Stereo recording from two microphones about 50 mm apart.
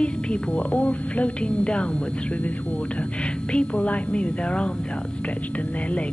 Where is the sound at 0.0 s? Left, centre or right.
Left.